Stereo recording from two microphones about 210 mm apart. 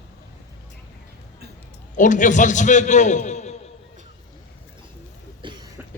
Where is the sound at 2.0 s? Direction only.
35° left (ahead or behind).